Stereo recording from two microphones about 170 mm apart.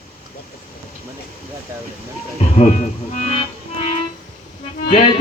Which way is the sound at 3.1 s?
40° left (ahead or behind).